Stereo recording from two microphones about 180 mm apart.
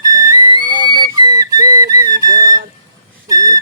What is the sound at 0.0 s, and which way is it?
Music, 20° right (ahead or behind).